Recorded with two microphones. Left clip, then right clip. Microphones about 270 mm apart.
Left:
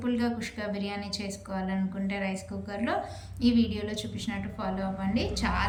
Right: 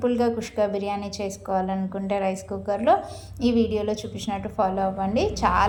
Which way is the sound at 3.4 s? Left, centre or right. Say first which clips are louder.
Right 6 dB; centre.